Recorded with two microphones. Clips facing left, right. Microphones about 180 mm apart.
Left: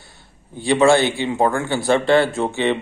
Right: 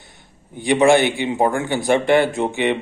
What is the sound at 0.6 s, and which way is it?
A man's voice, 20° right (ahead or behind).